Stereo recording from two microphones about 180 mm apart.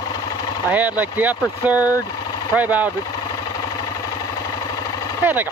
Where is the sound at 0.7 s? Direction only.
10° right (ahead or behind).